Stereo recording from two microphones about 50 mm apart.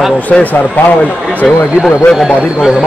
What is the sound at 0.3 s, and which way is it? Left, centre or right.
Speech, left.